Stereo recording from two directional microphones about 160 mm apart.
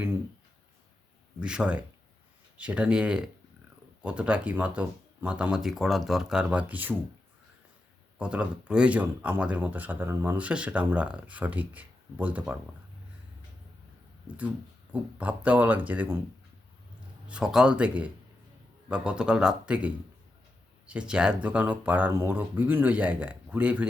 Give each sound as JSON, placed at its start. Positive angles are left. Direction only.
{"t": 1.4, "sound": "speech", "side_deg": -5}
{"t": 8.2, "sound": "speech", "side_deg": -5}
{"t": 15.2, "sound": "speech", "side_deg": -10}
{"t": 17.2, "sound": "speech", "side_deg": -5}